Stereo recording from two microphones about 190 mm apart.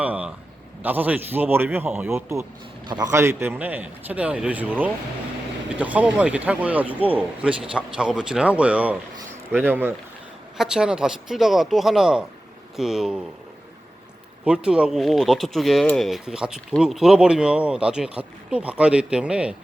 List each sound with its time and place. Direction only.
0.0 s a sound: 10° right (ahead or behind)
0.8 s a man's voice: 10° right (ahead or behind)
14.4 s speech: 5° right (ahead or behind)